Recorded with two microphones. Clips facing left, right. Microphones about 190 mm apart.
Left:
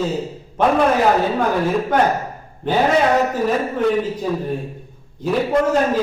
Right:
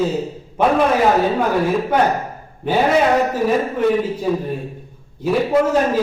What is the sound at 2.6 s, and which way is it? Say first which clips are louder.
Speech: right 1 dB; 10° right (ahead or behind).